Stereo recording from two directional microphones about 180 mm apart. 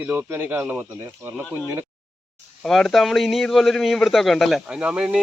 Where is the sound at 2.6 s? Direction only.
Centre (ahead or behind).